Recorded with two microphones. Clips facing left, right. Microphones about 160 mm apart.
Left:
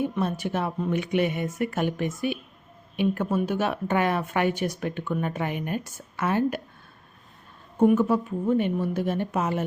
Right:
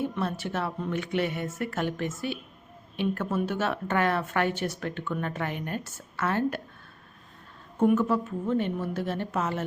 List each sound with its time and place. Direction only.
0.0 s speech: 15° left (ahead or behind)
7.9 s speech: 10° left (ahead or behind)